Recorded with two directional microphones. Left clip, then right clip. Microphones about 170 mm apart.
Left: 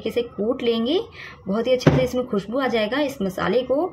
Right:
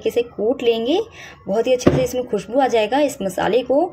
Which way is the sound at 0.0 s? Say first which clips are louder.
Right 5 dB; 15° right (ahead or behind).